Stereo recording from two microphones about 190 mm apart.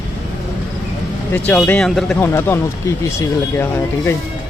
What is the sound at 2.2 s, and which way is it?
Speech, 15° left (ahead or behind).